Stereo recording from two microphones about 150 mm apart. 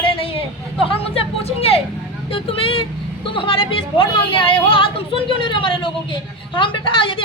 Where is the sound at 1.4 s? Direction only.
40° left (ahead or behind).